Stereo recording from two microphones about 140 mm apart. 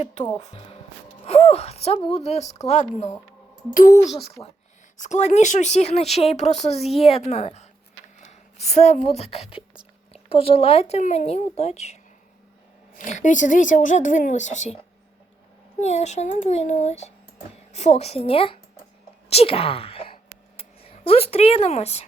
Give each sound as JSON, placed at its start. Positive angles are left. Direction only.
{"t": 1.2, "sound": "speech", "side_deg": 45}
{"t": 3.8, "sound": "speech", "side_deg": 70}
{"t": 4.4, "sound": "speech", "side_deg": 15}
{"t": 4.9, "sound": "speech", "side_deg": 55}
{"t": 13.1, "sound": "speech", "side_deg": 60}
{"t": 15.8, "sound": "speech", "side_deg": 50}